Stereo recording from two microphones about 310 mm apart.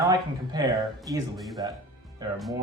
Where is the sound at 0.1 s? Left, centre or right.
Centre.